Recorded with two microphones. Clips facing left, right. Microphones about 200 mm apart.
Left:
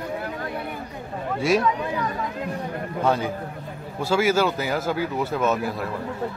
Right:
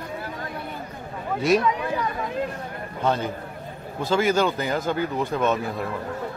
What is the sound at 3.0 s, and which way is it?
Speech, 10° left (ahead or behind).